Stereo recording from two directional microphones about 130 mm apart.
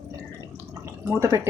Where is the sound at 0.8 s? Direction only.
20° right (ahead or behind).